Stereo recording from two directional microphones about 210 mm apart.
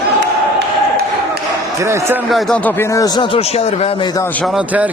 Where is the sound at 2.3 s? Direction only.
Centre (ahead or behind); by 4.3 s 20° left (ahead or behind).